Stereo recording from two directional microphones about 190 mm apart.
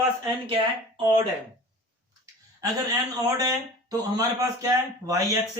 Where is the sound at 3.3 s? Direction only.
20° right (ahead or behind).